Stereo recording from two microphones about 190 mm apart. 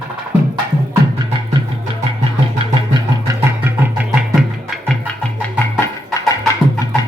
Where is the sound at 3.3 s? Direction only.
10° right (ahead or behind).